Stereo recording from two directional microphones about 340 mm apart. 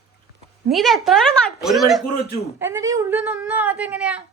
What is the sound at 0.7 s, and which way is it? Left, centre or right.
A woman's voice, centre.